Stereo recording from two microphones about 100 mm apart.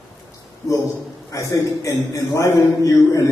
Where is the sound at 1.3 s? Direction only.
30° left (ahead or behind).